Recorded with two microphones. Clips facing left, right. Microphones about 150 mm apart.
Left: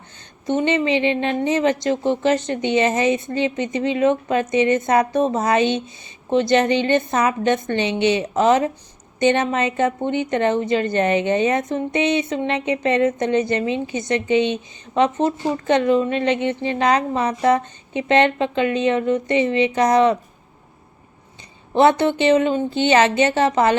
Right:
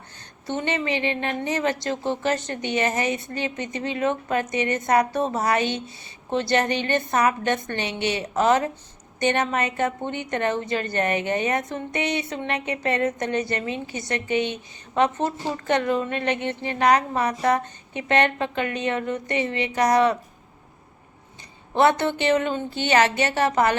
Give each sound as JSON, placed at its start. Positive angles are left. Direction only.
{"t": 0.4, "sound": "a woman's voice", "side_deg": 20}
{"t": 21.8, "sound": "a woman's voice", "side_deg": 20}